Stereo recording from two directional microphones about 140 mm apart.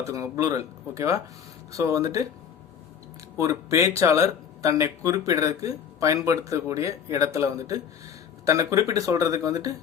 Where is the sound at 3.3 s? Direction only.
20° right (ahead or behind).